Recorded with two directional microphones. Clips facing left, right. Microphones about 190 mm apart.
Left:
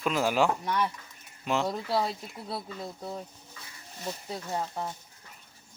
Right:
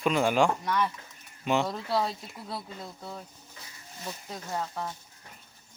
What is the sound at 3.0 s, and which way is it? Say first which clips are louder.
Speech: left 4 dB; 20° left (ahead or behind).